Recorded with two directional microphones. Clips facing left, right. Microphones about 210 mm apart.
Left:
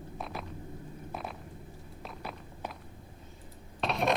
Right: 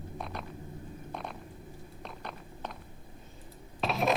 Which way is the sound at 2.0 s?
5° left (ahead or behind).